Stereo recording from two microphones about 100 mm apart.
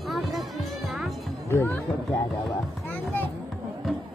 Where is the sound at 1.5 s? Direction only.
25° left (ahead or behind).